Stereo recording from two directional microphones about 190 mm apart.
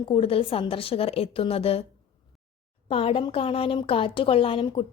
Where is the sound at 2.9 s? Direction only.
30° left (ahead or behind).